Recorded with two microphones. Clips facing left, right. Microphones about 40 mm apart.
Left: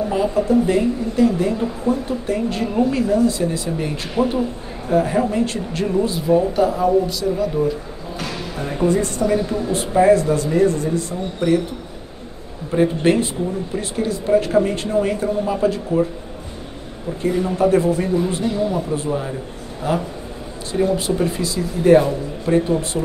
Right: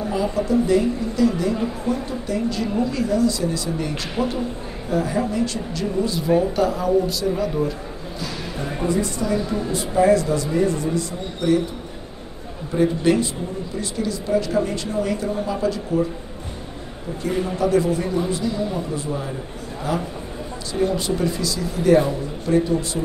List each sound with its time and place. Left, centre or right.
0.1 s speech: left
4.2 s a man's voice: left
6.4 s speech: centre
8.8 s a woman's voice: left
12.7 s speech: left
17.3 s speech: centre
17.6 s speech: left
19.0 s speech: centre
19.9 s speech: left
20.7 s speech: centre
21.2 s speech: left